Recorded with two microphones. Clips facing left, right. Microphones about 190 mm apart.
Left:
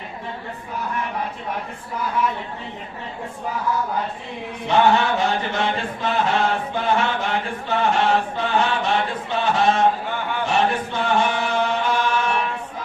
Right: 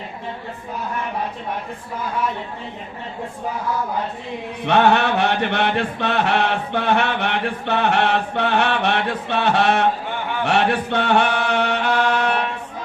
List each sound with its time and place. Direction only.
4.6 s chant: 65° right (ahead or behind)